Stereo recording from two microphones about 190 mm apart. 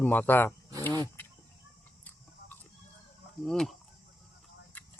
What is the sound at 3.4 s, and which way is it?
Speech, centre (ahead or behind).